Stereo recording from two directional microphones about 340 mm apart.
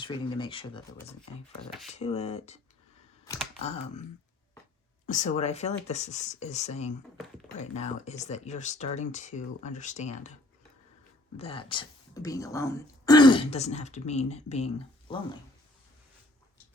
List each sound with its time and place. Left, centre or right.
0.0 s speech: centre
3.6 s speech: centre
5.0 s speech: left
11.3 s speech: centre